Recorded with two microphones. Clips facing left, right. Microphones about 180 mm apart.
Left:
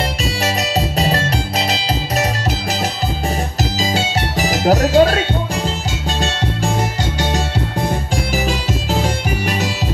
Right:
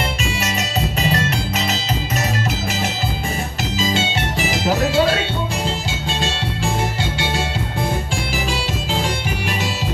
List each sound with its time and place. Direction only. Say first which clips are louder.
0.2 s music: left 3 dB; 35° left (ahead or behind)
3.8 s music: even; 40° left (ahead or behind)